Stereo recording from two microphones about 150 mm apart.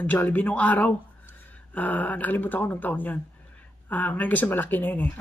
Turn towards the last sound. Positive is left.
turn(degrees=15)  # may be behind; listen again after turning